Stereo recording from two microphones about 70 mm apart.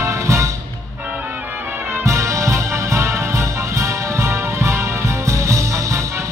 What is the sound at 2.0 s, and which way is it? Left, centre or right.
Music, right.